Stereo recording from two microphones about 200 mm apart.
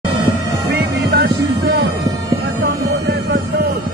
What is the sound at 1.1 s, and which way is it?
Music, 50° right (ahead or behind).